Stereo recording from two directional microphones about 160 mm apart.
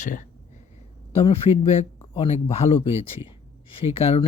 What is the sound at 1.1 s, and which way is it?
Speech, 35° left (ahead or behind).